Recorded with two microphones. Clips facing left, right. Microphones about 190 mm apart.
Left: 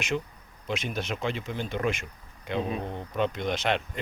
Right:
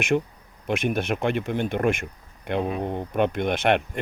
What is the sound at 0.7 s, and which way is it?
Speech, 55° right (ahead or behind).